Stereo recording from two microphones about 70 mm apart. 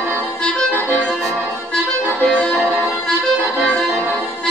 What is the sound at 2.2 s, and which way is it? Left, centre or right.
Music, centre.